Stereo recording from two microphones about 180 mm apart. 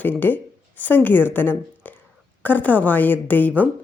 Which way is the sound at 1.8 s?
10° left (ahead or behind).